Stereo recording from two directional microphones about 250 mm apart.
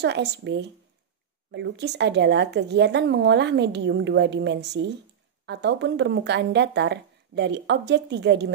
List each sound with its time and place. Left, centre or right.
0.0 s speech: right